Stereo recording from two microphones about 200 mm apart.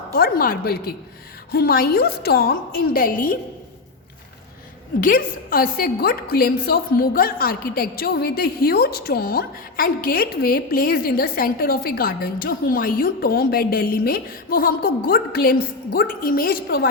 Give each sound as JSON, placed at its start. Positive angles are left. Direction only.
{"t": 0.1, "sound": "a woman's voice", "side_deg": 45}
{"t": 4.9, "sound": "a woman's voice", "side_deg": 45}